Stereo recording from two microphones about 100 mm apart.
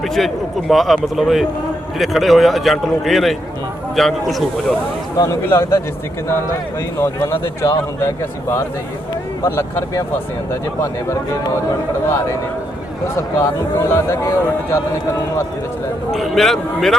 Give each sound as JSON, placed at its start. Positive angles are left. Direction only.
{"t": 0.0, "sound": "a man's voice", "side_deg": 0}
{"t": 5.1, "sound": "speech", "side_deg": 35}
{"t": 5.5, "sound": "speech", "side_deg": 25}
{"t": 7.0, "sound": "speech", "side_deg": 25}
{"t": 12.0, "sound": "speech", "side_deg": 30}
{"t": 16.1, "sound": "a man's voice", "side_deg": 0}